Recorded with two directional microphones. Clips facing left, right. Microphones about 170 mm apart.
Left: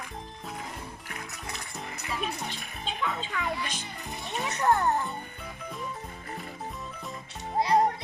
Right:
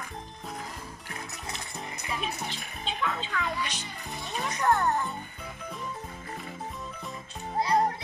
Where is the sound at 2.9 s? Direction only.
Centre (ahead or behind).